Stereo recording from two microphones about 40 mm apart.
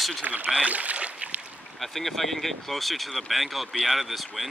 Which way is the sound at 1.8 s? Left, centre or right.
Centre.